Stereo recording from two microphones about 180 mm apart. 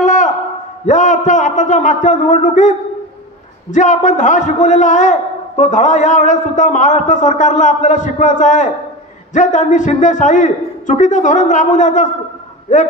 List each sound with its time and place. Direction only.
0.0 s a sound: 45° left (ahead or behind)
0.8 s a man's voice: 45° left (ahead or behind)
3.7 s a man's voice: 45° left (ahead or behind)